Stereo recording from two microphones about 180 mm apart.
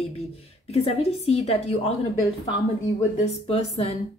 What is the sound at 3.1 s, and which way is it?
Speech, 35° left (ahead or behind).